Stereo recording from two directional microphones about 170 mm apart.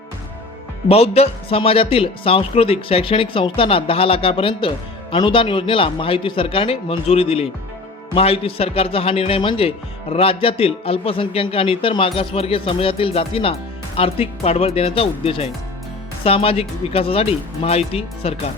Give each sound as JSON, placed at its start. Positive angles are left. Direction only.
{"t": 0.9, "sound": "a man's voice", "side_deg": 35}